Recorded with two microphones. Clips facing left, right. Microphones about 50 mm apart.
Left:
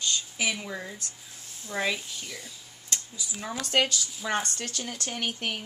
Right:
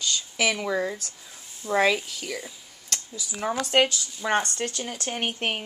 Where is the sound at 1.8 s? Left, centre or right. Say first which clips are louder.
Right 7 dB; right.